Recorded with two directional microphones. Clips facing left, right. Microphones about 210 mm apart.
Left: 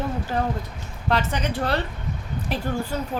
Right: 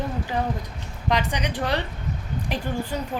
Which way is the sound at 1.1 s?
15° right (ahead or behind).